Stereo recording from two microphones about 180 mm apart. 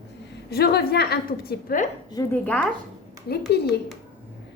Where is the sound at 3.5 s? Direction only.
65° left (ahead or behind).